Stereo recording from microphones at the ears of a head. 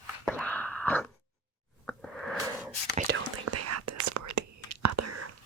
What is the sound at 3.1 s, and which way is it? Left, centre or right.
Whispering, right.